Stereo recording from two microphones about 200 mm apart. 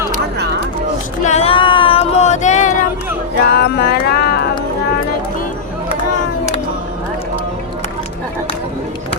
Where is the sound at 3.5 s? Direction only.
50° left (ahead or behind).